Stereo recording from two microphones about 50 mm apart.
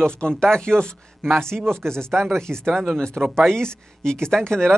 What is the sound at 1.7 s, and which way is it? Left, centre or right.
Speech, right.